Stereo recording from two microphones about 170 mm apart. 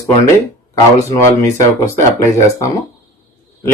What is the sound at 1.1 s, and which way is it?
Speech, 15° left (ahead or behind).